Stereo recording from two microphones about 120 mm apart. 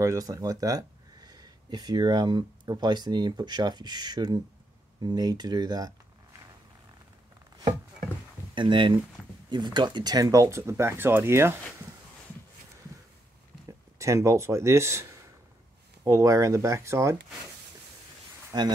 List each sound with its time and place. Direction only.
0.0 s speech: 30° right (ahead or behind)
8.5 s speech: 40° right (ahead or behind); by 11.5 s 20° right (ahead or behind)
13.9 s speech: 25° right (ahead or behind)
18.5 s speech: 35° right (ahead or behind)